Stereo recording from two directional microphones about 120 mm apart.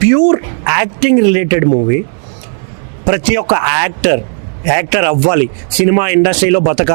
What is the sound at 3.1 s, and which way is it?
Speech, 15° right (ahead or behind).